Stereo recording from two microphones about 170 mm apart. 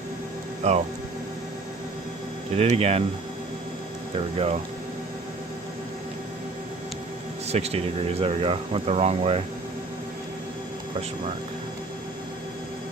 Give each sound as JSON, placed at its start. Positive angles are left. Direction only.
{"t": 0.6, "sound": "speech", "side_deg": -40}
{"t": 2.6, "sound": "speech", "side_deg": -35}
{"t": 4.1, "sound": "speech", "side_deg": -35}
{"t": 7.4, "sound": "speech", "side_deg": -40}